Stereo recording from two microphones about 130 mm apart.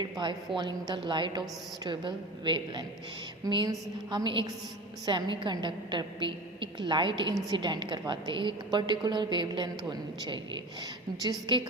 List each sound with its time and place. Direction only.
0.0 s a woman's voice: 35° right (ahead or behind)